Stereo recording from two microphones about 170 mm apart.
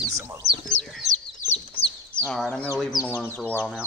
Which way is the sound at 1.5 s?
35° left (ahead or behind).